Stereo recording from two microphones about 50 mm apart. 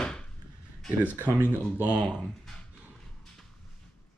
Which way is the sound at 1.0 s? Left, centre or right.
Right.